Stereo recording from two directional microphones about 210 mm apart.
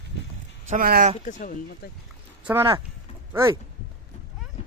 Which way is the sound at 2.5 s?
10° right (ahead or behind).